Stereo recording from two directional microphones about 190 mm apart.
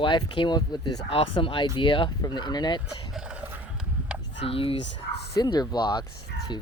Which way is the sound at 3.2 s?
5° right (ahead or behind).